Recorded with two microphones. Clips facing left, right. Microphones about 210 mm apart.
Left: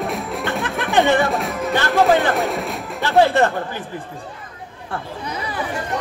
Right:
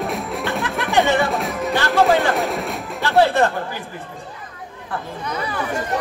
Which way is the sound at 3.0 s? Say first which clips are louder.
Left 1 dB; 15° left (ahead or behind).